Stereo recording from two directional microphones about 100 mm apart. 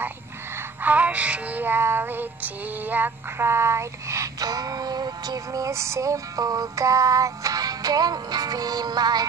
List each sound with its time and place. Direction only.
0.8 s music: 15° right (ahead or behind); by 9.2 s 45° right (ahead or behind)